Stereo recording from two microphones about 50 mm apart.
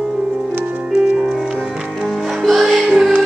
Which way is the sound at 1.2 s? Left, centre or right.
Centre.